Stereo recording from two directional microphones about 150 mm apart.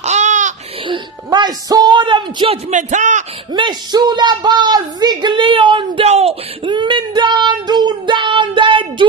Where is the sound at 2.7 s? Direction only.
55° right (ahead or behind).